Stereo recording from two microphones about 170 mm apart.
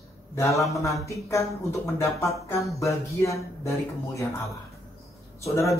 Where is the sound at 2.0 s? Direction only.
Centre (ahead or behind).